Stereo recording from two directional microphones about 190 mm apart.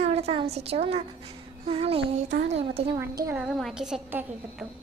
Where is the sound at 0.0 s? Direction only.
35° right (ahead or behind).